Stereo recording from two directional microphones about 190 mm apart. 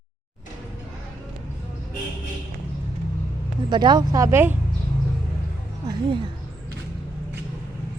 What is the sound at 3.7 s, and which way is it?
Speech, 25° right (ahead or behind).